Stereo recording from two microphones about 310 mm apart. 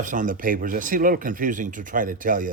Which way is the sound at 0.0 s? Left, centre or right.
Right.